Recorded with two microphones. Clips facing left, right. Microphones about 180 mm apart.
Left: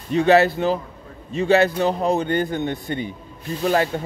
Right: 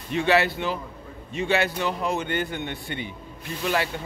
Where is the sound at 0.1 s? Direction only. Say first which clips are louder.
Left 6 dB; 40° left (ahead or behind).